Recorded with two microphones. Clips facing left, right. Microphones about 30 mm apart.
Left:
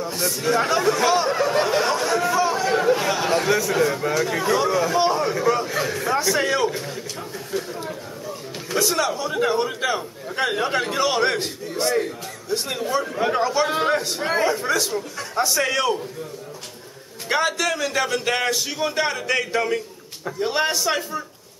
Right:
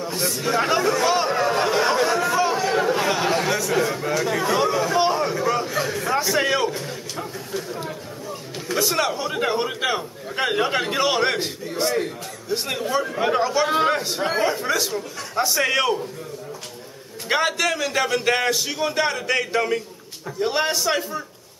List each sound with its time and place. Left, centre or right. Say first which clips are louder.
0.1 s a man's voice: left 1 dB; centre
1.9 s chatter: right 1 dB; centre
3.7 s a man's voice: left 1 dB; centre
4.6 s a sound: even; centre
7.5 s chatter: left 3 dB; centre
8.6 s a man's voice: even; centre
9.0 s a man's voice: left 1 dB; centre
17.3 s a man's voice: right 1 dB; centre